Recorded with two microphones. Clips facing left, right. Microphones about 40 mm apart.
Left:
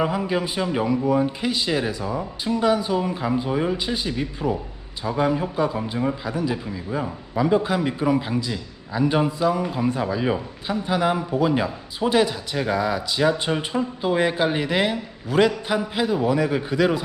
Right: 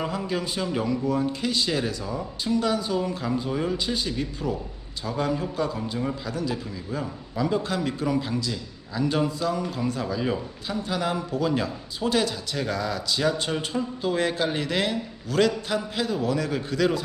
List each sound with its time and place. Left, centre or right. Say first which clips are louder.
0.0 s a man's voice: left 5 dB; centre